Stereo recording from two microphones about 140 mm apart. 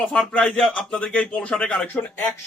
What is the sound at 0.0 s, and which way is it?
A man's voice, 5° left (ahead or behind).